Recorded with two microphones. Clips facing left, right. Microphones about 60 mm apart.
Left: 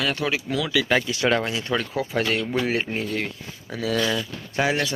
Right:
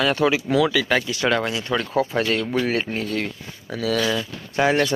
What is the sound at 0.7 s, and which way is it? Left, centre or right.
Speech, centre.